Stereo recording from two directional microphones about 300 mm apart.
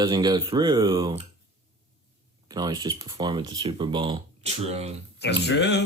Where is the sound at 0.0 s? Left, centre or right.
Centre.